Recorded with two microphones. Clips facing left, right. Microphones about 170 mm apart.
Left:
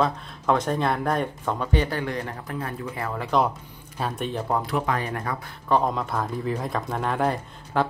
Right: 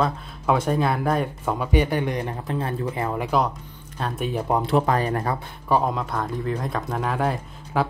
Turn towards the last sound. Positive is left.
turn(degrees=0)  # may be behind; listen again after turning